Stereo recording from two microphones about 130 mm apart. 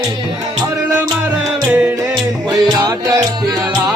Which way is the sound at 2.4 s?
25° right (ahead or behind).